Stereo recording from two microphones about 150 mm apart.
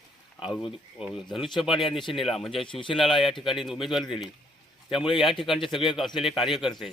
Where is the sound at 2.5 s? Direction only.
35° left (ahead or behind).